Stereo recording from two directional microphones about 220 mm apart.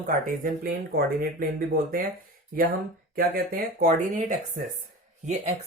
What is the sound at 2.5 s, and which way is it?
Speech, 40° right (ahead or behind).